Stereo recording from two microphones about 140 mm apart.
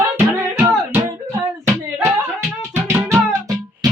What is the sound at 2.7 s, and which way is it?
Music, 20° right (ahead or behind).